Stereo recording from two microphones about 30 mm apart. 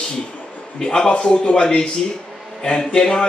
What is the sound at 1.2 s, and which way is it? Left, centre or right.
Speech, left.